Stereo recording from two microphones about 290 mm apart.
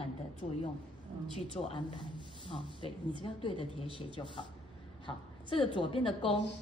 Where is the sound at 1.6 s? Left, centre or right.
Centre.